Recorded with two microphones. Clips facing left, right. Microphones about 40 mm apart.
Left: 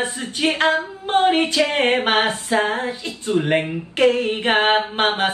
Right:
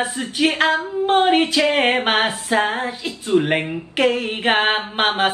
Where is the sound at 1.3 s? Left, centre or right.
Centre.